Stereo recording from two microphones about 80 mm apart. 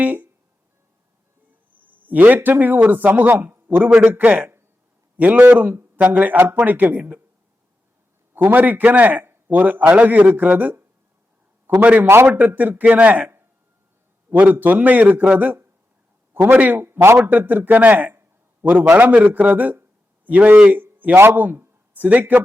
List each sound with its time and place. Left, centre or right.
0.0 s a man's voice: right
1.7 s a man's voice: right
3.8 s a man's voice: centre
4.1 s a man's voice: right
8.4 s a man's voice: right
20.7 s a sound: right
21.2 s speech: right